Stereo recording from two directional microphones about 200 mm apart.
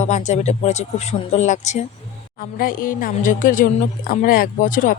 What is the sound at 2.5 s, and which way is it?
Speech, 45° left (ahead or behind).